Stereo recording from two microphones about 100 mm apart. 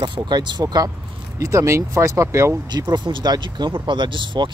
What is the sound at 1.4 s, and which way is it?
Speech, 30° right (ahead or behind).